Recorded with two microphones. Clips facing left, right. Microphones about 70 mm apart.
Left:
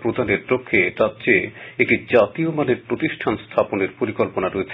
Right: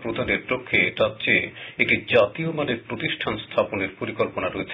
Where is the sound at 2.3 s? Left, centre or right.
Left.